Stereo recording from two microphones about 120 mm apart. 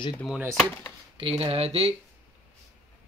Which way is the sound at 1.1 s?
50° right (ahead or behind).